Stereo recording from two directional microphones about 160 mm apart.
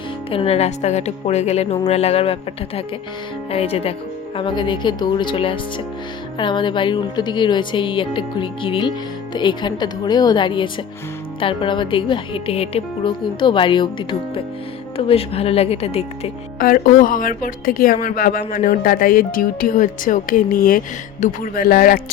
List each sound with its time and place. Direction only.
0.3 s a woman's voice: 35° left (ahead or behind)
16.6 s speech: 60° left (ahead or behind)